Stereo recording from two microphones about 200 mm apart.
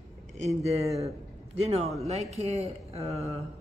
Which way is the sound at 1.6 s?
30° right (ahead or behind).